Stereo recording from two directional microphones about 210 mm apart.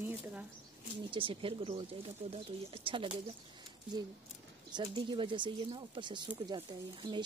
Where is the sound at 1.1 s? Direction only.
25° right (ahead or behind).